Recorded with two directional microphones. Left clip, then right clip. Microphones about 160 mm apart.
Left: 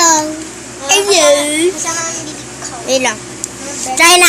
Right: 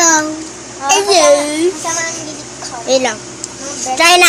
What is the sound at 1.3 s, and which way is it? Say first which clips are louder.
Speech: even; 5° left (ahead or behind).